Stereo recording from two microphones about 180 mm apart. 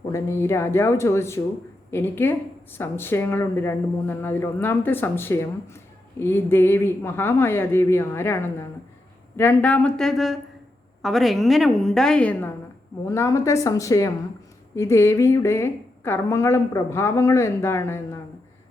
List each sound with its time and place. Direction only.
0.1 s a woman's voice: 15° left (ahead or behind)